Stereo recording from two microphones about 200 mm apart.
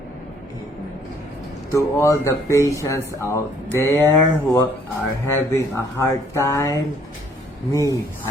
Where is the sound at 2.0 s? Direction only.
15° left (ahead or behind).